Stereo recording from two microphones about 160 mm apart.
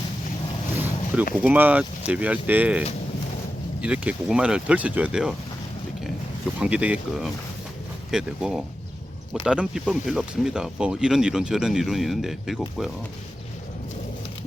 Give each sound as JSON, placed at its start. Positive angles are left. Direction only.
{"t": 1.4, "sound": "speech", "side_deg": -10}
{"t": 6.6, "sound": "speech", "side_deg": -5}